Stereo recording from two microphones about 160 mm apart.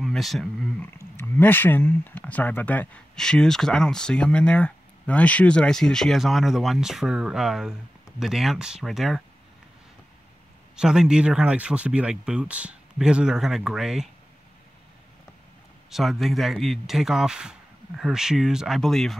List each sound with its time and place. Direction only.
0.0 s speech: centre (ahead or behind)
0.9 s speech: 15° left (ahead or behind)
10.8 s speech: 5° right (ahead or behind)
15.9 s speech: centre (ahead or behind)